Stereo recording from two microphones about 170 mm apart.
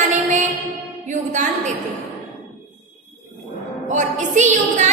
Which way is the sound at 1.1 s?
45° right (ahead or behind).